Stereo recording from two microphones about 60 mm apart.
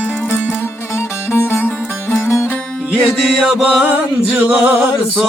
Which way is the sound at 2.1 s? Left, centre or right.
Left.